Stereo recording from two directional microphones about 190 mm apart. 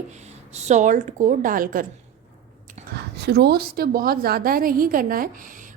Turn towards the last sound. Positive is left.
turn(degrees=-45)  # may be behind; listen again after turning